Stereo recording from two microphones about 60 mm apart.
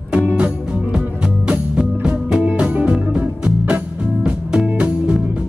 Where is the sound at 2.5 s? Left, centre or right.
Centre.